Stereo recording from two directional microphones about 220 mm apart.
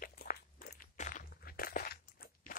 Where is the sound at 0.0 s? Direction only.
40° left (ahead or behind).